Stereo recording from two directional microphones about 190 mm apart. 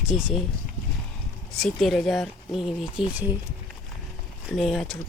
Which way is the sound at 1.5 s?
Centre (ahead or behind).